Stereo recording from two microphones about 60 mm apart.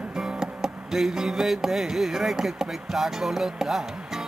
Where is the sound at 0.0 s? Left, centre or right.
Centre.